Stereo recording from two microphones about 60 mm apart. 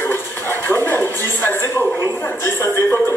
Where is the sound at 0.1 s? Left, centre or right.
Left.